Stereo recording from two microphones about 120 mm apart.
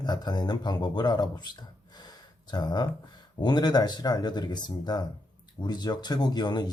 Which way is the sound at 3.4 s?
35° left (ahead or behind).